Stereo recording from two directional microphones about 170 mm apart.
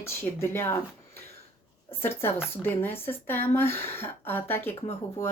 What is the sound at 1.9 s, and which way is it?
Speech, 15° left (ahead or behind).